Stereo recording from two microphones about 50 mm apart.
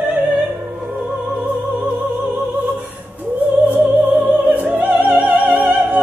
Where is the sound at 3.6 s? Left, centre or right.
Right.